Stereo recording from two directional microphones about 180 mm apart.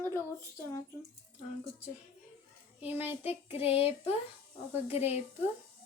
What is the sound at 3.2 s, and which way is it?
Child singing, 30° left (ahead or behind).